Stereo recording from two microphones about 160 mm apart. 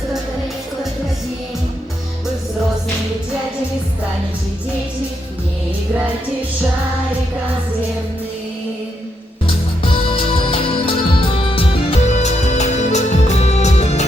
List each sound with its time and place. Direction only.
9.8 s music: 35° left (ahead or behind)